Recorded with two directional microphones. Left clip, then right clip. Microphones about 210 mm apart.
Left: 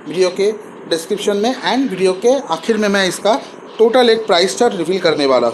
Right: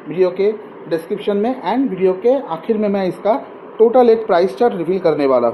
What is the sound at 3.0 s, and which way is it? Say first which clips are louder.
Speech: left 2 dB; 45° left (ahead or behind).